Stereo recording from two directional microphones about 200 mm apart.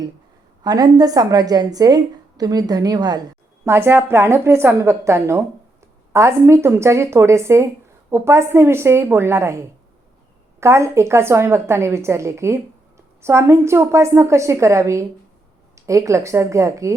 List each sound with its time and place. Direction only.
0.6 s a woman's voice: 20° right (ahead or behind)